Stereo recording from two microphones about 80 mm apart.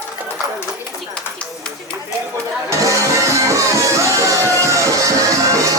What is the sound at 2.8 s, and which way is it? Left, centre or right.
Music, right.